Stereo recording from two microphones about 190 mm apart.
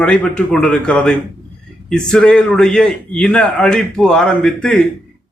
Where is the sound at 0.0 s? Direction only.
5° left (ahead or behind).